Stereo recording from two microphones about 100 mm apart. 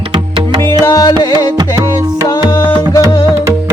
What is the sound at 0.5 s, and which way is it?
Music, 50° right (ahead or behind).